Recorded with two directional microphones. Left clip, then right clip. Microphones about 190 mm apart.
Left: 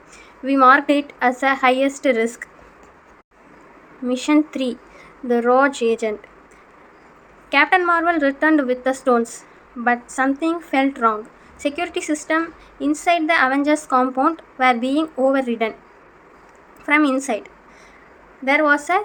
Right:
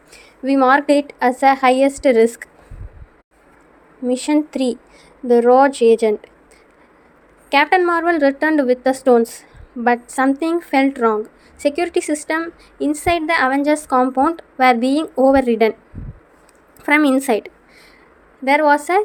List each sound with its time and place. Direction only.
0.1 s a woman's voice: 40° right (ahead or behind)
4.0 s a woman's voice: 35° right (ahead or behind)
7.5 s a woman's voice: 40° right (ahead or behind)
16.8 s a woman's voice: 45° right (ahead or behind)